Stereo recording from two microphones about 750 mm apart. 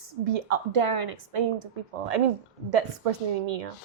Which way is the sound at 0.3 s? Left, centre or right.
Right.